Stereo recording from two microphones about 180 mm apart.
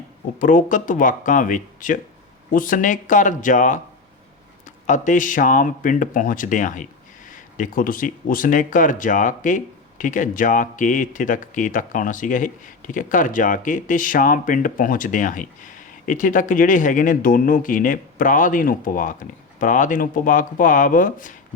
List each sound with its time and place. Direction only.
0.3 s speech: 50° left (ahead or behind)